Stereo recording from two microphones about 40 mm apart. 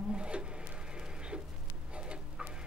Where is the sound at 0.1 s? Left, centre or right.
Right.